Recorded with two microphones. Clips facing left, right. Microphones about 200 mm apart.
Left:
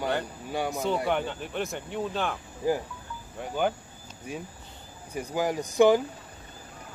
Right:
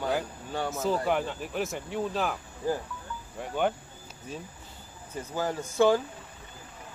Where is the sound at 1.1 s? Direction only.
Centre (ahead or behind).